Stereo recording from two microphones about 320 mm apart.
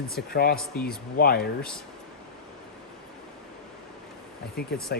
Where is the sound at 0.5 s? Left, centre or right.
Centre.